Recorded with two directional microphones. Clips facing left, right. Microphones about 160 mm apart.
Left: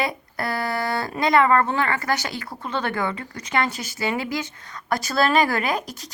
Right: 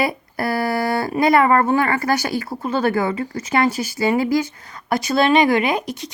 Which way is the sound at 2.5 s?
35° right (ahead or behind).